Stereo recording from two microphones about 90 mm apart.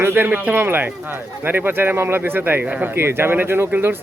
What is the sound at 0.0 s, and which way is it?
Speech, 25° right (ahead or behind).